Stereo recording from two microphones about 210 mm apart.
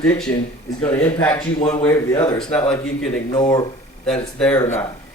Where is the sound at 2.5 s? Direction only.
5° left (ahead or behind).